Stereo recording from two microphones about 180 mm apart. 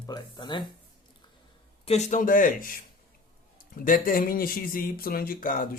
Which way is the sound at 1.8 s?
40° left (ahead or behind).